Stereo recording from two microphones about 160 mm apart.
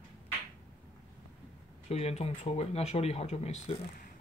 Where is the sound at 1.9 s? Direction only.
40° left (ahead or behind).